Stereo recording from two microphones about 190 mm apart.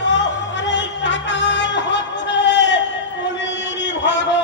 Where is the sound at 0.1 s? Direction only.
70° left (ahead or behind).